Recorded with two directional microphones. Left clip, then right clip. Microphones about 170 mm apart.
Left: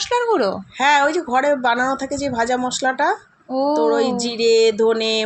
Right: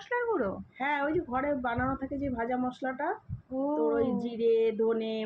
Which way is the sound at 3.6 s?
50° left (ahead or behind).